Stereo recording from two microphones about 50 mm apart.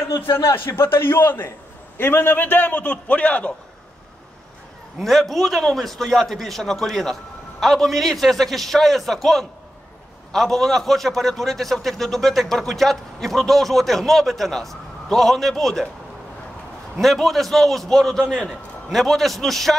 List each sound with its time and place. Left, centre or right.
0.4 s a man's voice: left
5.0 s a man's voice: centre
17.0 s a man's voice: centre